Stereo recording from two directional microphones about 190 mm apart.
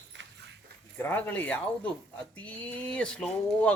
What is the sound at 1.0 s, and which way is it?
Speech, 10° left (ahead or behind).